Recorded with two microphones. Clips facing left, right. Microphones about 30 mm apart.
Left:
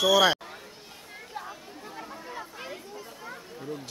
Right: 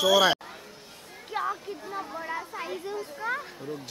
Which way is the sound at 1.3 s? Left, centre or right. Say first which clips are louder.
Right 10 dB; right.